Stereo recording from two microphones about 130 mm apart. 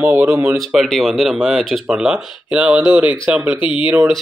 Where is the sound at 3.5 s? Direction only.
40° left (ahead or behind).